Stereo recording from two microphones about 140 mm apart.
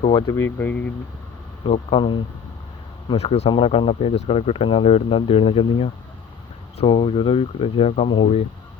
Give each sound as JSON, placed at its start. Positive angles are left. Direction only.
{"t": 0.1, "sound": "speech", "side_deg": 30}
{"t": 1.7, "sound": "speech", "side_deg": 45}